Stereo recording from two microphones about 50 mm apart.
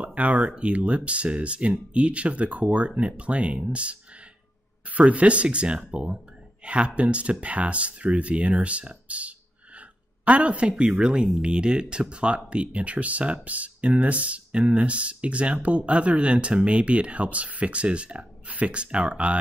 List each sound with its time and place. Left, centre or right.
0.0 s speech: right
5.0 s speech: right